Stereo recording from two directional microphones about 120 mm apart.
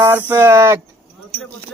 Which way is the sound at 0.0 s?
15° right (ahead or behind).